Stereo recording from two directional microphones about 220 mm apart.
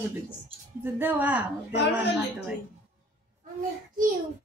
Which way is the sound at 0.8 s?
10° right (ahead or behind).